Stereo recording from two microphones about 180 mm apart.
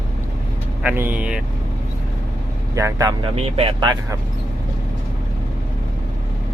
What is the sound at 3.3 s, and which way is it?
Speech, 35° right (ahead or behind).